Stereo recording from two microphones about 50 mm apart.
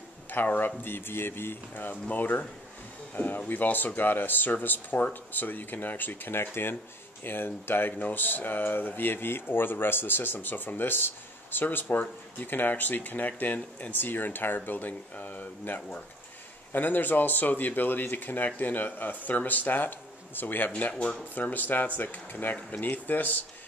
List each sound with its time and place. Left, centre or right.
0.3 s speech: left
0.8 s speech: left
3.4 s speech: left